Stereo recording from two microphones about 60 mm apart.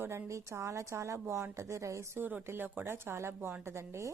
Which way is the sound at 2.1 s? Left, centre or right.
Right.